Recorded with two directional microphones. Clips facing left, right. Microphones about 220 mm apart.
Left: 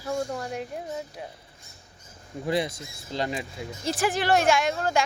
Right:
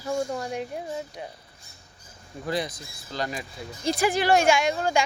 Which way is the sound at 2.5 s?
25° left (ahead or behind).